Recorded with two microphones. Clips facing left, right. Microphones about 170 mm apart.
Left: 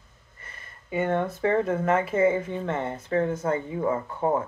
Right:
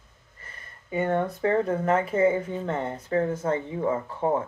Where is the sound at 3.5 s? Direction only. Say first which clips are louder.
Even; 5° left (ahead or behind).